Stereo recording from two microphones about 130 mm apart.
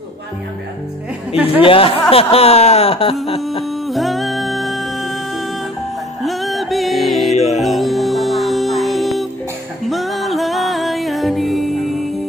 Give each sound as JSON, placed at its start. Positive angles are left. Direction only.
{"t": 1.4, "sound": "speech", "side_deg": 45}
{"t": 3.8, "sound": "music", "side_deg": 0}
{"t": 6.2, "sound": "music", "side_deg": 0}
{"t": 7.3, "sound": "music", "side_deg": 60}
{"t": 7.6, "sound": "music", "side_deg": 0}